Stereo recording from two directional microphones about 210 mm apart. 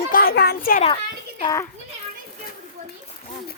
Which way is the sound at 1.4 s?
20° left (ahead or behind).